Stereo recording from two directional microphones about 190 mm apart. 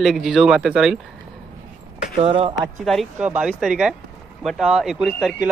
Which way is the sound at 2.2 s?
30° right (ahead or behind).